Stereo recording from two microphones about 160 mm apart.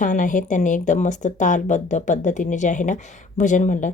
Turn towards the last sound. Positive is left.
turn(degrees=50)  # may be behind; listen again after turning